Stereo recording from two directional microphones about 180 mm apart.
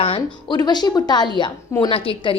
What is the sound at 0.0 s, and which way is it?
A woman's voice, 30° left (ahead or behind).